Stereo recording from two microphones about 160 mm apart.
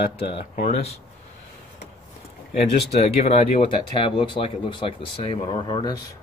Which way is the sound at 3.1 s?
40° left (ahead or behind).